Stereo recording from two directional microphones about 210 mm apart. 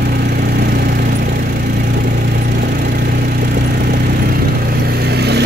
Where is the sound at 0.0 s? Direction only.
45° right (ahead or behind).